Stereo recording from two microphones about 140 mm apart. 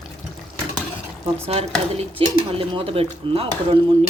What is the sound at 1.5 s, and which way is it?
A woman's voice, 45° right (ahead or behind).